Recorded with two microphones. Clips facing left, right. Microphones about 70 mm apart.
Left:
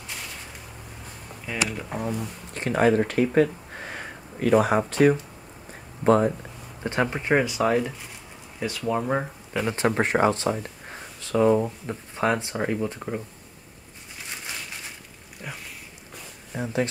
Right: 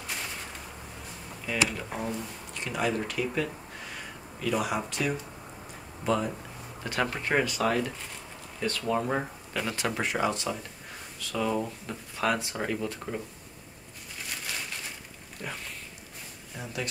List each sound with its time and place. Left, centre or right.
2.0 s speech: left
6.8 s speech: left
9.8 s speech: left
15.4 s a sound: centre
16.5 s speech: left